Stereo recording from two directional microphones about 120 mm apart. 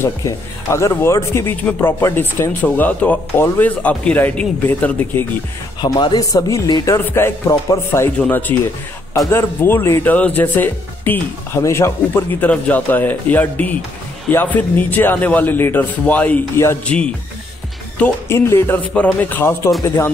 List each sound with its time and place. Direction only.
0.0 s speech: 25° left (ahead or behind)
5.8 s speech: 35° left (ahead or behind)
8.2 s speech: 15° left (ahead or behind)